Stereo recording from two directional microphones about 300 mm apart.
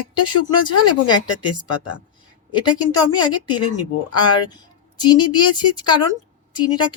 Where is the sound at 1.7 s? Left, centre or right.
Left.